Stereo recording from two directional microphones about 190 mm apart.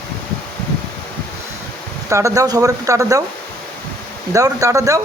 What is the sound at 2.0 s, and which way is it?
Speech, 15° right (ahead or behind).